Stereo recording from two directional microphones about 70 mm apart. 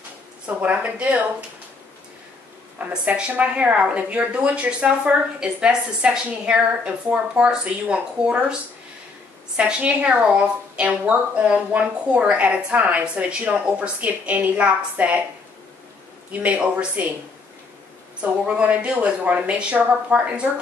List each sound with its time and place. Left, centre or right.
0.5 s a woman's voice: centre
2.9 s a woman's voice: centre
9.6 s a woman's voice: centre
16.3 s a woman's voice: right
18.5 s a woman's voice: centre